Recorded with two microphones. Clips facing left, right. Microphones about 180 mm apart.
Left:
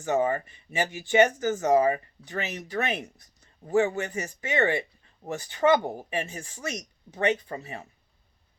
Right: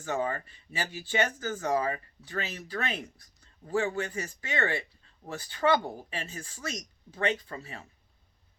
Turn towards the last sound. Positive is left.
turn(degrees=20)  # may be behind; listen again after turning